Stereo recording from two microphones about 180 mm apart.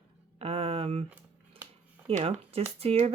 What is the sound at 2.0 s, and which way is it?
Speech, 35° right (ahead or behind).